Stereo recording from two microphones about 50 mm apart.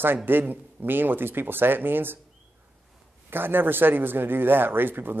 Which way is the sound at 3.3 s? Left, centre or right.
Right.